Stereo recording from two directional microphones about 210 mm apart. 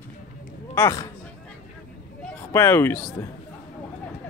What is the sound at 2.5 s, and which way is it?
Speech, 10° left (ahead or behind).